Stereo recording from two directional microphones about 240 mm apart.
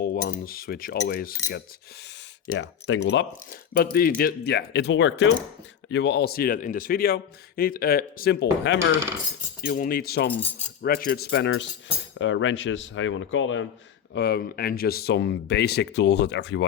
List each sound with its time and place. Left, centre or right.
0.0 s a man's voice: left
2.5 s a man's voice: left
14.1 s speech: left